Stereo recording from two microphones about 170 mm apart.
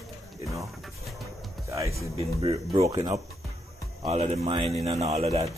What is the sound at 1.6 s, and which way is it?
Music, 15° right (ahead or behind).